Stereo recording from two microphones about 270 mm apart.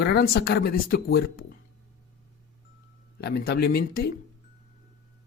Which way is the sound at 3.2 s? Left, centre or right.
Left.